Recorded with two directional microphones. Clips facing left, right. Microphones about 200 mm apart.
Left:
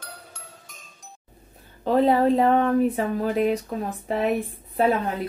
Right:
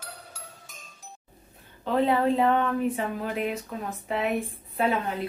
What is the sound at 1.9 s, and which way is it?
Speech, 40° left (ahead or behind).